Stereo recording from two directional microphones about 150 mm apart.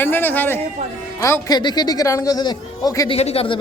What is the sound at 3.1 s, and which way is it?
Speech, 40° left (ahead or behind).